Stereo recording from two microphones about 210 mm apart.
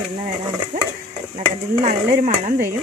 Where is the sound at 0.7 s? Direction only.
40° right (ahead or behind).